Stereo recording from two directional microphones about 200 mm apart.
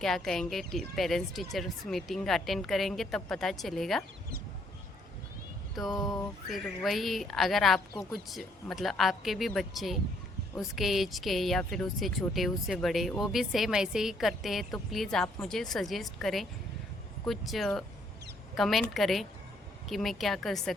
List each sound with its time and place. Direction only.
0.0 s speech: centre (ahead or behind)
5.9 s music: 20° left (ahead or behind)
6.5 s speech: centre (ahead or behind)